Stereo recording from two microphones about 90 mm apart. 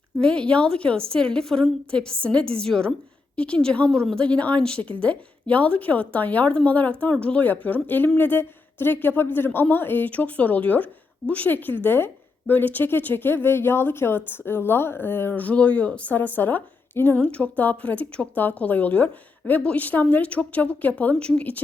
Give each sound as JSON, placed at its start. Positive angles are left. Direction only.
{"t": 0.2, "sound": "speech", "side_deg": 10}